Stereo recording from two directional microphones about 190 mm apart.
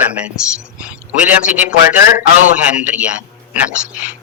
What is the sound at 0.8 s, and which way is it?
A man's voice, 10° right (ahead or behind).